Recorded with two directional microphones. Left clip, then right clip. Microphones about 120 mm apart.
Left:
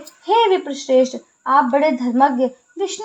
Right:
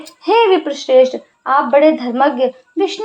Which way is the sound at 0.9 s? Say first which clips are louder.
Right 5 dB; 20° right (ahead or behind).